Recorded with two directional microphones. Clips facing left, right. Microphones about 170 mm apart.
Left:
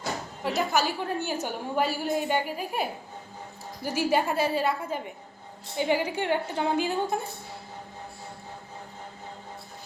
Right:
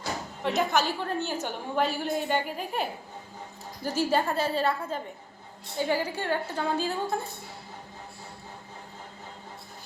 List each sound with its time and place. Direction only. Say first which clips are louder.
0.4 s a woman's voice: even; 5° left (ahead or behind)
3.8 s a woman's voice: left 1 dB; 10° left (ahead or behind)